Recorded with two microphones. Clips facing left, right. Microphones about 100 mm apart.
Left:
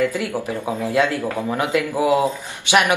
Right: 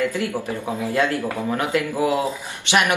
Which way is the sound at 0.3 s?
15° left (ahead or behind).